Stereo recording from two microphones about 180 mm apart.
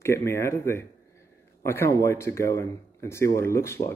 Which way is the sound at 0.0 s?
15° left (ahead or behind).